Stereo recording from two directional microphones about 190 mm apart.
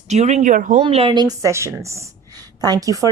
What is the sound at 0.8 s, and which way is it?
A woman's voice, 30° right (ahead or behind).